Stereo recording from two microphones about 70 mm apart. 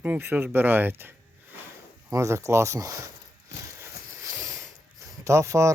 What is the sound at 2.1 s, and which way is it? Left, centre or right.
Speech, right.